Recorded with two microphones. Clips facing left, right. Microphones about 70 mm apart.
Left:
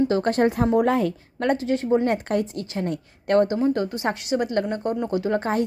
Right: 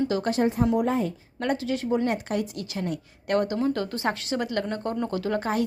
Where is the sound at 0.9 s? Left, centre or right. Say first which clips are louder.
Left 4 dB; left.